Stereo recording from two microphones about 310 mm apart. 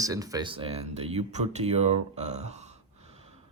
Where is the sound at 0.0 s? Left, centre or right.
Centre.